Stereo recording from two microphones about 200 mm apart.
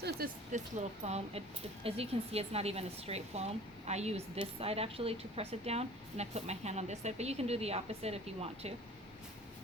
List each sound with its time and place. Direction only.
0.2 s speech: 50° right (ahead or behind)
1.0 s speech: 30° right (ahead or behind)